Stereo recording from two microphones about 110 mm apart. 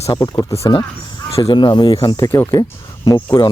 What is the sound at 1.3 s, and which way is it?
Speech, 60° left (ahead or behind).